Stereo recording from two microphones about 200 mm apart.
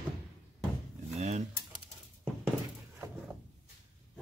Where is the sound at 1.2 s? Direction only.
35° right (ahead or behind).